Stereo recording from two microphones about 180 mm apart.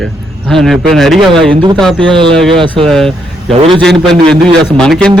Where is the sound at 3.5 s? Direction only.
30° right (ahead or behind).